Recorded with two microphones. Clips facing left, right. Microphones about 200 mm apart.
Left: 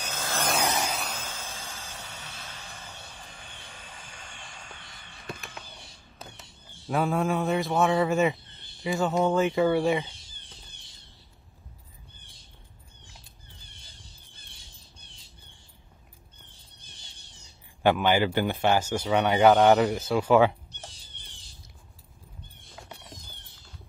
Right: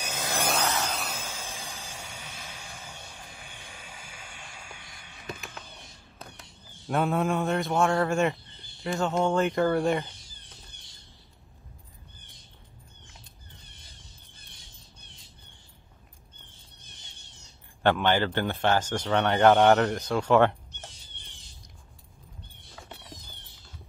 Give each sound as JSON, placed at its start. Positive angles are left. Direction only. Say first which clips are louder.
{"t": 0.0, "sound": "vehicle", "louder": "right 1 dB", "side_deg": -15}
{"t": 0.6, "sound": "vehicle", "louder": "left 1 dB", "side_deg": 15}
{"t": 0.9, "sound": "vehicle", "louder": "even", "side_deg": -5}
{"t": 10.2, "sound": "a sound", "louder": "even", "side_deg": 25}
{"t": 17.8, "sound": "a man's voice", "louder": "left 1 dB", "side_deg": 10}
{"t": 22.8, "sound": "a sound", "louder": "even", "side_deg": 0}